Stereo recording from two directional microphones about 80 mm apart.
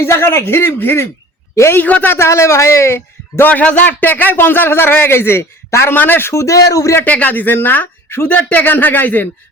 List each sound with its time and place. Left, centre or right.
0.0 s a man's voice: left
1.8 s speech: left
2.1 s a man's voice: left
3.5 s speech: centre; by 7.0 s left
7.0 s speech: left